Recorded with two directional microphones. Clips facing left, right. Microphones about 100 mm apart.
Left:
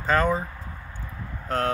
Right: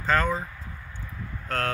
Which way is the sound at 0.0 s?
15° left (ahead or behind).